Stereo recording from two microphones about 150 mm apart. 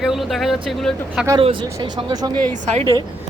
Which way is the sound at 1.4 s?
35° right (ahead or behind).